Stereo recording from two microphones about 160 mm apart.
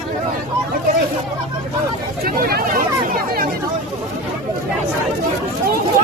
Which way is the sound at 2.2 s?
70° right (ahead or behind).